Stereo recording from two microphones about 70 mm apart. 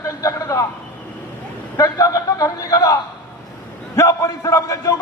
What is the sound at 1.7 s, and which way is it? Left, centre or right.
A man's voice, left.